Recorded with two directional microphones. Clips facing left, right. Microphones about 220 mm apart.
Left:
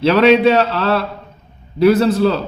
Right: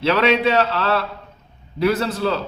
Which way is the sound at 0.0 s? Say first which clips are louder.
Left 7 dB; 40° left (ahead or behind).